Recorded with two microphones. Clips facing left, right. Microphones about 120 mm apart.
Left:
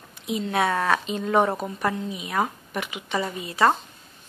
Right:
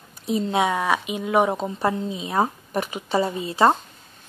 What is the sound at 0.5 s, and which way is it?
Speech, 15° right (ahead or behind).